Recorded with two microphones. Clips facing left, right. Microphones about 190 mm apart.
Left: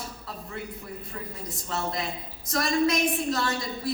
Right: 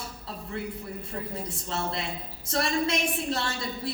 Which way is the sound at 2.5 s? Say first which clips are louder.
Left 3 dB; 30° right (ahead or behind).